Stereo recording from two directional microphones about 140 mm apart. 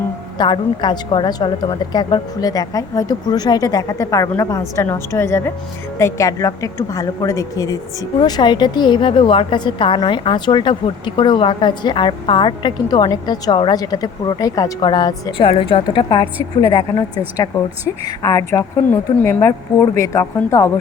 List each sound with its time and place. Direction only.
0.3 s a woman's voice: 35° left (ahead or behind)
15.4 s a woman's voice: 40° left (ahead or behind); by 16.8 s 25° left (ahead or behind)
18.0 s a woman's voice: 25° left (ahead or behind)
18.9 s a woman's voice: 15° left (ahead or behind)